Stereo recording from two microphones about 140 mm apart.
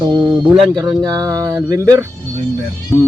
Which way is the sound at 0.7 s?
25° right (ahead or behind).